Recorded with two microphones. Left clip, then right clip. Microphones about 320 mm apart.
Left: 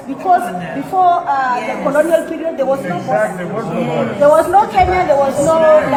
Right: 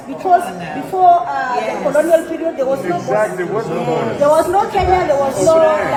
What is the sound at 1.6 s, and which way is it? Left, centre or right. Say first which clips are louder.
A man's voice: even; centre.